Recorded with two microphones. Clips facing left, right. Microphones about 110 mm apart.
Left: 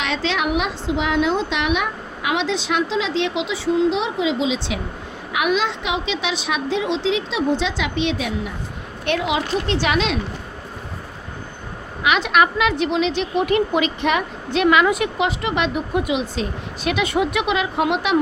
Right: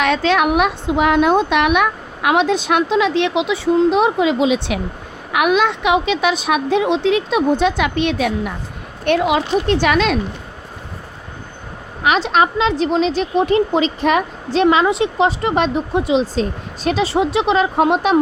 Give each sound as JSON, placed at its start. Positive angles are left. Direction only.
{"t": 0.0, "sound": "a woman's voice", "side_deg": -50}
{"t": 12.0, "sound": "a woman's voice", "side_deg": -35}